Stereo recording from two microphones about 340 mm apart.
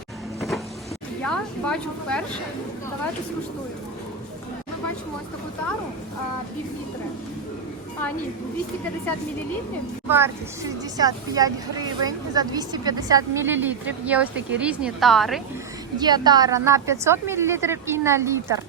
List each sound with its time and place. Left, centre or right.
0.3 s cupboard open or close: centre
1.2 s speech: centre
10.1 s speech: centre
16.0 s speech: centre